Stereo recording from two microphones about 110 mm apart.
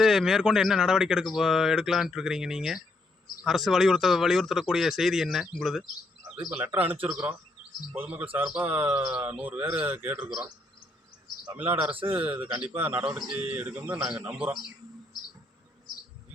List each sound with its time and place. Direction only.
0.0 s speech: 5° right (ahead or behind)
6.7 s speech: 15° right (ahead or behind)
11.5 s speech: 15° right (ahead or behind)
11.9 s speech: 55° right (ahead or behind)
12.3 s speech: 10° right (ahead or behind)